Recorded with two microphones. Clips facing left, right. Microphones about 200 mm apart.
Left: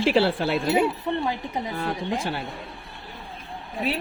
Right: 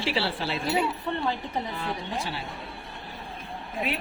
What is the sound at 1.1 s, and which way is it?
Speech, 15° left (ahead or behind).